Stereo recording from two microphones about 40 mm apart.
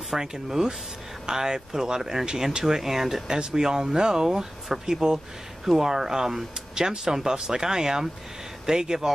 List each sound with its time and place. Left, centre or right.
0.1 s speech: centre